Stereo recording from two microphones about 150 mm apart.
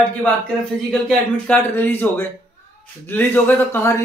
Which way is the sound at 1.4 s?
10° left (ahead or behind).